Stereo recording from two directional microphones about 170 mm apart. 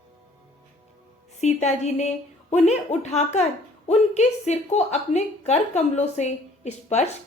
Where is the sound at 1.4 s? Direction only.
40° left (ahead or behind).